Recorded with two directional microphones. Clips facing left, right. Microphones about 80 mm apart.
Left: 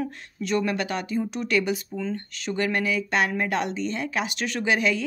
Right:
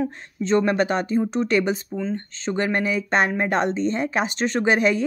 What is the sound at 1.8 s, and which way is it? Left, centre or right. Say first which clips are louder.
Speech: right 3 dB; centre.